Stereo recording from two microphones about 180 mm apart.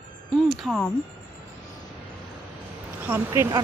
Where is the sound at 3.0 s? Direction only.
10° right (ahead or behind).